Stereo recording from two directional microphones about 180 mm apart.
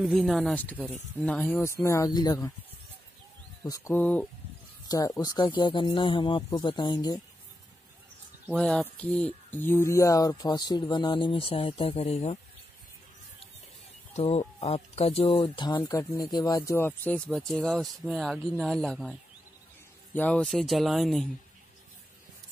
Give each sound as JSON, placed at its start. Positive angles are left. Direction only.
{"t": 0.0, "sound": "speech", "side_deg": 0}
{"t": 3.6, "sound": "speech", "side_deg": 15}
{"t": 4.8, "sound": "speech", "side_deg": 20}
{"t": 8.5, "sound": "speech", "side_deg": 5}
{"t": 14.1, "sound": "speech", "side_deg": 35}
{"t": 20.2, "sound": "speech", "side_deg": 5}